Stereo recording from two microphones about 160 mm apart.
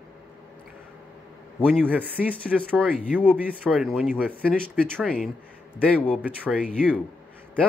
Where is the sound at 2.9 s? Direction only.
10° right (ahead or behind).